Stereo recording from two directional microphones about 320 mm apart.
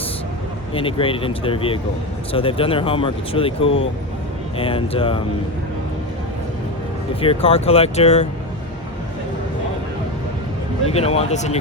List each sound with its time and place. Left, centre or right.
0.7 s speech: centre
7.2 s speech: centre
10.8 s speech: centre